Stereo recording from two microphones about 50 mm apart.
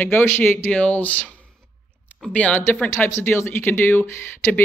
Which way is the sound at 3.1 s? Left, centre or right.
Left.